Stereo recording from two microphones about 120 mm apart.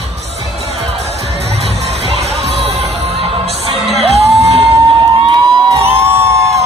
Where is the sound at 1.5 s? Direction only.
60° right (ahead or behind).